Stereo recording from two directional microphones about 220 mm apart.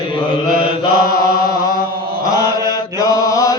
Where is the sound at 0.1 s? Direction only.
20° left (ahead or behind).